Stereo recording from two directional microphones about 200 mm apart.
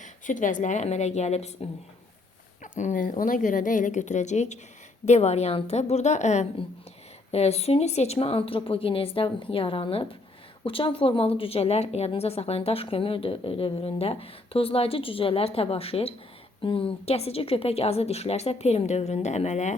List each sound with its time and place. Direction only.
0.0 s a woman's voice: 40° left (ahead or behind)
2.7 s a woman's voice: 40° left (ahead or behind)